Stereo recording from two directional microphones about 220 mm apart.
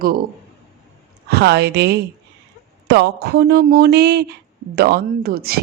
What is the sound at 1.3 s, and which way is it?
Speech, 50° right (ahead or behind).